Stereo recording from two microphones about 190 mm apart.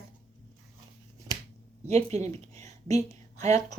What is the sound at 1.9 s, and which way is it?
Speech, 35° right (ahead or behind).